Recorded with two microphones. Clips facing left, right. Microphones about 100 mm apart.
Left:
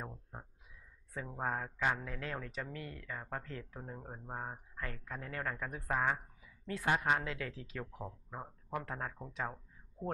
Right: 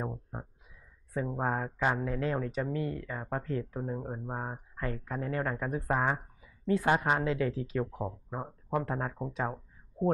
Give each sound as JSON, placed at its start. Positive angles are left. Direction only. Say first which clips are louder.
{"t": 0.0, "sound": "a sound", "louder": "right 9 dB", "side_deg": -25}
{"t": 1.1, "sound": "speech", "louder": "right 7 dB", "side_deg": -20}
{"t": 7.8, "sound": "speech", "louder": "right 10 dB", "side_deg": -30}